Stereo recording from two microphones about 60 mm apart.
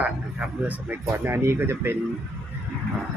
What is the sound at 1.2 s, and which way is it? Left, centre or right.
Speech, right.